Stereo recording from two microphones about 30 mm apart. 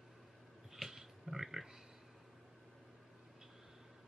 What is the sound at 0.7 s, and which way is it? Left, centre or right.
Pig, centre.